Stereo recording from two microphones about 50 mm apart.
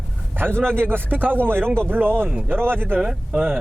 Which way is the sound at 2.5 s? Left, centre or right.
Right.